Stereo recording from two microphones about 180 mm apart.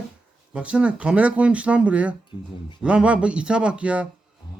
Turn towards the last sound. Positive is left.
turn(degrees=-5)  # may be behind; listen again after turning